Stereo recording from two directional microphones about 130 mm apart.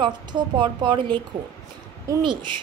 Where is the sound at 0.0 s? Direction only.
35° right (ahead or behind).